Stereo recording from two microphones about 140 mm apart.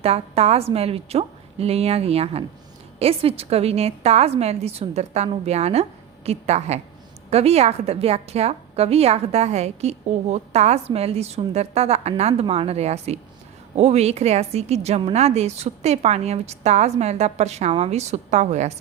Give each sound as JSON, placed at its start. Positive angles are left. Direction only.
{"t": 0.0, "sound": "a woman's voice", "side_deg": -50}